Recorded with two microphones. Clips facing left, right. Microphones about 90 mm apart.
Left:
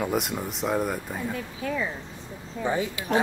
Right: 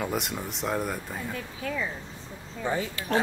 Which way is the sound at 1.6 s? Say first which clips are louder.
Left 3 dB; 25° left (ahead or behind).